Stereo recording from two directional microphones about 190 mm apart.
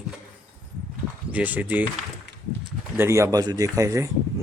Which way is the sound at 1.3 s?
10° right (ahead or behind).